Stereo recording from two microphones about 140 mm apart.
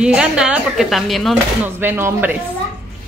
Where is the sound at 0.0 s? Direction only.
5° right (ahead or behind).